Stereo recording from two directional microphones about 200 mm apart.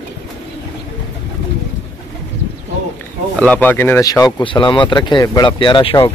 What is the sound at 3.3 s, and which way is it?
Speech, 5° left (ahead or behind).